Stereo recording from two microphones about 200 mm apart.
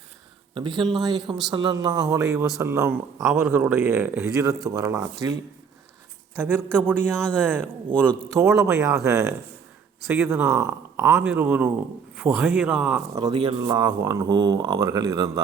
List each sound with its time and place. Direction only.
0.5 s a man's voice: 25° right (ahead or behind)
6.3 s a man's voice: 10° right (ahead or behind)
13.1 s speech: 25° right (ahead or behind)